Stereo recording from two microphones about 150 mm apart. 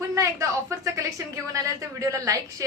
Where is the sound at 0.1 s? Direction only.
20° right (ahead or behind).